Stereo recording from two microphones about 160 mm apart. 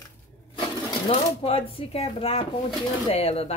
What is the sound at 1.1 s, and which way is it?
Speech, 35° left (ahead or behind).